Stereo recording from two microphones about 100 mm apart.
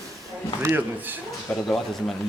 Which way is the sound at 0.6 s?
20° right (ahead or behind).